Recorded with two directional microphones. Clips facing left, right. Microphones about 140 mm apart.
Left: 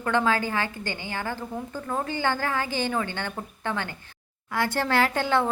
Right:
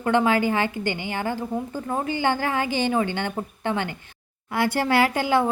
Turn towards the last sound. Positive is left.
turn(degrees=-10)  # may be behind; listen again after turning